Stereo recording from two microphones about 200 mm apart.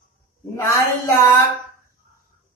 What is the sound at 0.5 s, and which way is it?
Speech, 15° left (ahead or behind).